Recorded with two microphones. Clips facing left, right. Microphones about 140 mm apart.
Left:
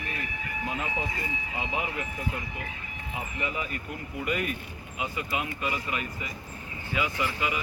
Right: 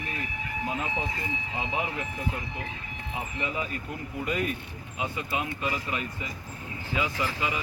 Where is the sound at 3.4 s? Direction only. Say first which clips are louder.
Right 1 dB; 30° right (ahead or behind).